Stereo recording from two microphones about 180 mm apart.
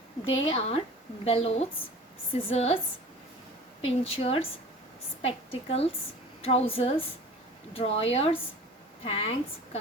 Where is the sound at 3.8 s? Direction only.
30° left (ahead or behind).